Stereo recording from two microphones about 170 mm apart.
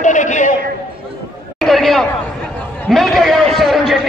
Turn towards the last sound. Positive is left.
turn(degrees=0)  # may be behind; listen again after turning